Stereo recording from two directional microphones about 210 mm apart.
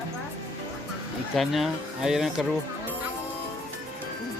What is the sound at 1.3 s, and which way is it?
Speech, centre (ahead or behind).